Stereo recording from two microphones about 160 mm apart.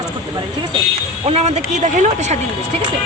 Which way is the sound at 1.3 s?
40° right (ahead or behind).